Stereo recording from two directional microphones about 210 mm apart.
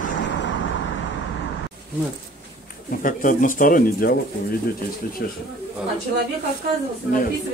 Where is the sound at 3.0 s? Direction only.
40° left (ahead or behind).